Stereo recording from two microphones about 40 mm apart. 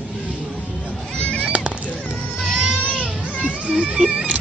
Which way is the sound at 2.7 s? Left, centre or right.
Left.